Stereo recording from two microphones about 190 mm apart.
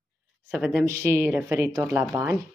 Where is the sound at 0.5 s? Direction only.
5° right (ahead or behind).